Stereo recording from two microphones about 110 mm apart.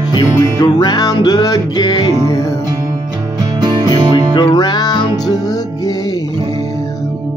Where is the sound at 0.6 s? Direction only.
40° left (ahead or behind).